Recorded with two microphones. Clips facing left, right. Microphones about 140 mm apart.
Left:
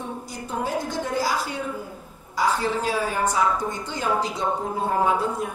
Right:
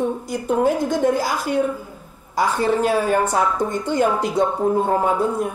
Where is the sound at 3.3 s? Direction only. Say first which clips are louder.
Right 3 dB; 55° right (ahead or behind).